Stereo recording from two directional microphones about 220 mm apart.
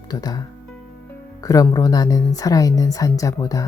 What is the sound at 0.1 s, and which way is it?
A woman's voice, 15° left (ahead or behind).